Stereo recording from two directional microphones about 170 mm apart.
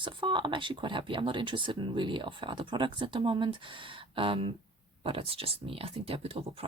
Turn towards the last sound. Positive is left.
turn(degrees=-35)  # may be behind; listen again after turning